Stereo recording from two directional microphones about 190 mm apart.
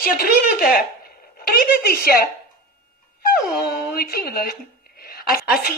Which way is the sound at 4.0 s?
55° left (ahead or behind).